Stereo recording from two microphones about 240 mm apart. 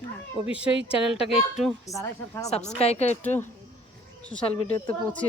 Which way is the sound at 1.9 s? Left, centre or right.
Centre.